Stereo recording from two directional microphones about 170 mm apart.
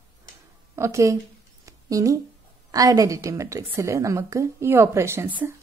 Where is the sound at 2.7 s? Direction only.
20° right (ahead or behind).